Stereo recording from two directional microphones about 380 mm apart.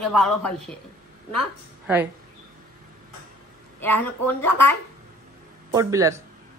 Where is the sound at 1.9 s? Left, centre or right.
Centre.